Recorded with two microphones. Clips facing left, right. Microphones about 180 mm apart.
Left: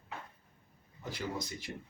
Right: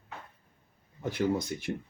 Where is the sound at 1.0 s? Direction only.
55° right (ahead or behind).